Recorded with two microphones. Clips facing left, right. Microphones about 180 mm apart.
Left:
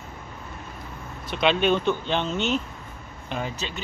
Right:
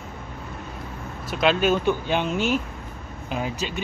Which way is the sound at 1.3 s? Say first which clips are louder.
Right 1 dB; 5° right (ahead or behind).